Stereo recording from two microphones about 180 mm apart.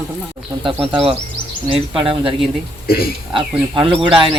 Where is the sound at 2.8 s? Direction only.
55° left (ahead or behind).